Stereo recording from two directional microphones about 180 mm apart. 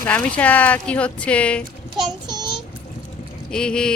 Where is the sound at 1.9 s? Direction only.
20° right (ahead or behind).